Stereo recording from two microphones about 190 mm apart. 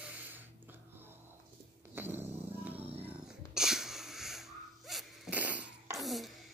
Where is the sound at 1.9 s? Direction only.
10° right (ahead or behind).